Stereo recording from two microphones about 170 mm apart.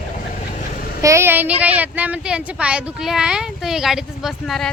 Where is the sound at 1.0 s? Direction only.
15° right (ahead or behind).